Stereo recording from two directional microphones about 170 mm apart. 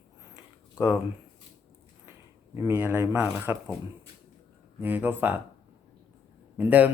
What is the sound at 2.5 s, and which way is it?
Speech, 15° right (ahead or behind).